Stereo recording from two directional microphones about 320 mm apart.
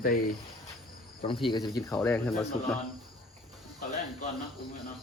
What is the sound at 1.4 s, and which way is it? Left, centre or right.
Speech, centre.